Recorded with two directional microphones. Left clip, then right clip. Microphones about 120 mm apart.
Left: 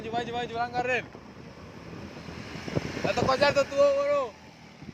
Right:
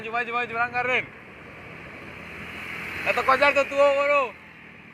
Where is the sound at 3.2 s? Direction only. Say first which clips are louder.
Right 5 dB; 25° left (ahead or behind).